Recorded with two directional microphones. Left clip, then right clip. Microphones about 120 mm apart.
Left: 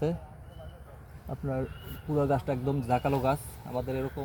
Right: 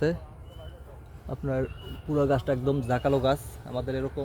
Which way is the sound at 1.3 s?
65° right (ahead or behind).